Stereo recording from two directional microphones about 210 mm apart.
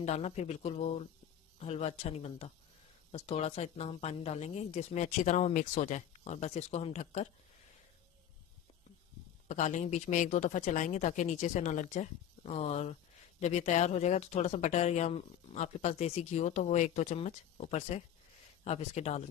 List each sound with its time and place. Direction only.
0.0 s speech: 30° left (ahead or behind)
9.5 s speech: 35° left (ahead or behind)